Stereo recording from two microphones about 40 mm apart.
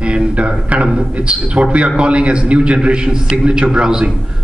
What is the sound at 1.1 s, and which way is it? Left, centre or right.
A man's voice, right.